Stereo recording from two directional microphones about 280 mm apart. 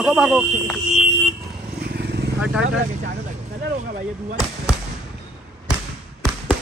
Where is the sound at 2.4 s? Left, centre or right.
Centre.